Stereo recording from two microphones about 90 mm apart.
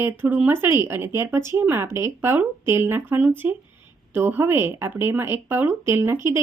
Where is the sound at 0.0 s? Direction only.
20° right (ahead or behind).